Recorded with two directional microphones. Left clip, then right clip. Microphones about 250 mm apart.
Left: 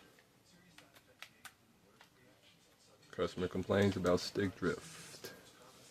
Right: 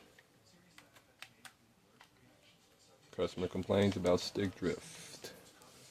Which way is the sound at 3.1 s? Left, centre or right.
Centre.